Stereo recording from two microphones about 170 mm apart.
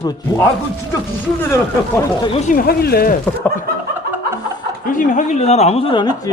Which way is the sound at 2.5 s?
65° left (ahead or behind).